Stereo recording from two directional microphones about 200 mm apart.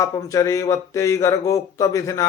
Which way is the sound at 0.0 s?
15° left (ahead or behind).